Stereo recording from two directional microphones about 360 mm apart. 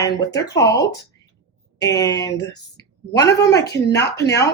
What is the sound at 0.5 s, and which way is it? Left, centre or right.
Speech, centre.